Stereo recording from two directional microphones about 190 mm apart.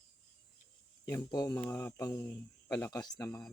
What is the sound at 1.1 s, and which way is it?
Speech, 20° left (ahead or behind).